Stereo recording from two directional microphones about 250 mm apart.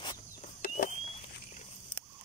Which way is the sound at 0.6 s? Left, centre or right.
Left.